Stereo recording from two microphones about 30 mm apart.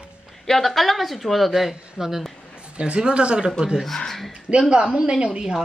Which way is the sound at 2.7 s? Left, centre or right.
Right.